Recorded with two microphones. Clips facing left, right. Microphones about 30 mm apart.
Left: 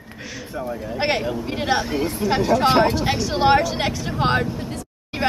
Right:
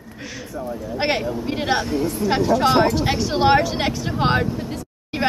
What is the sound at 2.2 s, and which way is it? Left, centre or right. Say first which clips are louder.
Speech: even; left.